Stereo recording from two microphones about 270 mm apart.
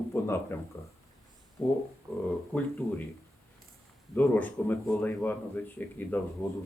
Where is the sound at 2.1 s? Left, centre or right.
Centre.